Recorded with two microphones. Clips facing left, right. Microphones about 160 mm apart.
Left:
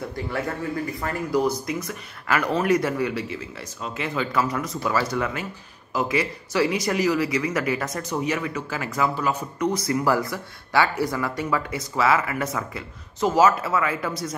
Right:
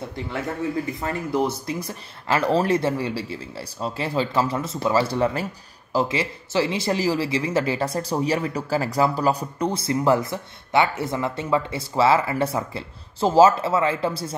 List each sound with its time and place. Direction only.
1.0 s speech: 25° right (ahead or behind)